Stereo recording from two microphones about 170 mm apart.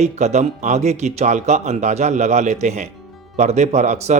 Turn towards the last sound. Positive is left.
turn(degrees=-40)  # may be behind; listen again after turning